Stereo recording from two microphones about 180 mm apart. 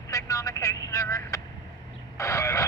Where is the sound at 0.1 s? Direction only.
20° left (ahead or behind).